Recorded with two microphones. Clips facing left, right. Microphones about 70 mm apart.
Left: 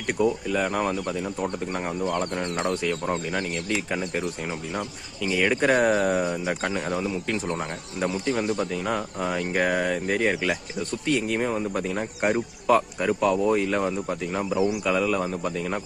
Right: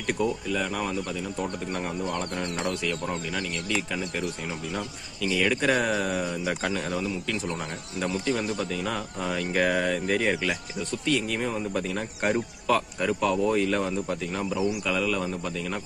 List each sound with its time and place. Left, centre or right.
0.2 s speech: centre
0.5 s speech: left
2.0 s speech: centre
2.6 s speech: left
3.1 s speech: centre
6.8 s speech: left